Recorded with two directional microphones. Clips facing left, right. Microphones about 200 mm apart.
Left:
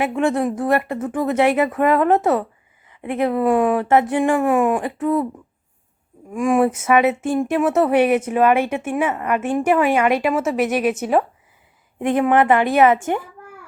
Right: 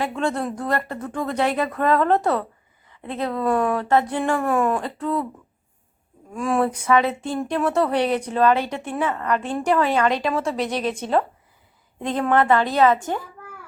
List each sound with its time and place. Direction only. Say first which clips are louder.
0.0 s a woman's voice: left 5 dB; 25° left (ahead or behind)
6.3 s speech: left 5 dB; 15° left (ahead or behind)
7.3 s a woman's voice: left 2 dB; 10° left (ahead or behind)
7.9 s a woman's voice: left 5 dB; 10° left (ahead or behind)
11.9 s a woman's voice: left 4 dB; 15° left (ahead or behind)